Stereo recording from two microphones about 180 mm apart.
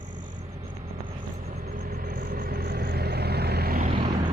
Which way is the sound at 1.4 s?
50° right (ahead or behind).